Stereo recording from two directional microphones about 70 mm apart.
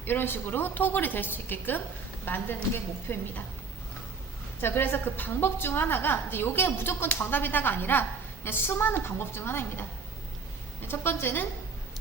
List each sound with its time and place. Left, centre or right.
0.0 s a woman's voice: left
4.6 s a woman's voice: left